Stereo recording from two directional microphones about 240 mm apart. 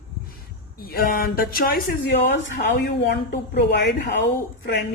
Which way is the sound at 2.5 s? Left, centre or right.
Left.